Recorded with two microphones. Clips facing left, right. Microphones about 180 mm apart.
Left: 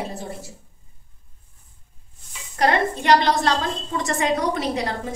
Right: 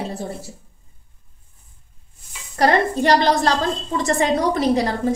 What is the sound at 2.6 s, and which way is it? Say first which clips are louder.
A woman's voice: right 3 dB; 40° right (ahead or behind).